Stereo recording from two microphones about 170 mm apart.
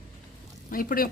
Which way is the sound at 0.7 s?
55° left (ahead or behind).